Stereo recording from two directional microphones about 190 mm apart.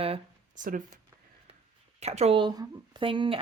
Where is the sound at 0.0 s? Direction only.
35° right (ahead or behind).